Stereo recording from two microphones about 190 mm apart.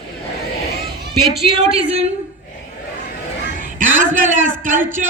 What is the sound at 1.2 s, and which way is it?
Speech, centre (ahead or behind).